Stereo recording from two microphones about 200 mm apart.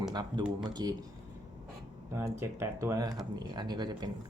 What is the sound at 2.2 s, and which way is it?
Speech, 15° right (ahead or behind).